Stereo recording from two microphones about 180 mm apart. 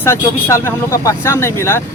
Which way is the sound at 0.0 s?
15° left (ahead or behind).